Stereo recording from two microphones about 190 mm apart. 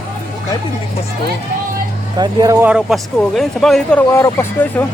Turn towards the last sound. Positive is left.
turn(degrees=10)  # may be behind; listen again after turning